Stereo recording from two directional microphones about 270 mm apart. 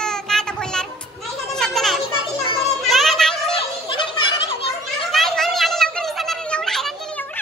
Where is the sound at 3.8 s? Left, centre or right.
Centre.